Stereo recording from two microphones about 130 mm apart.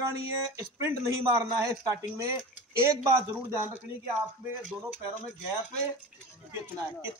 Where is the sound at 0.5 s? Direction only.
20° right (ahead or behind).